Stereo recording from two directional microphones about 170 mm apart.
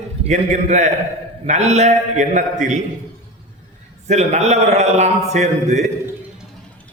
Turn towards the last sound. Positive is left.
turn(degrees=-45)  # may be behind; listen again after turning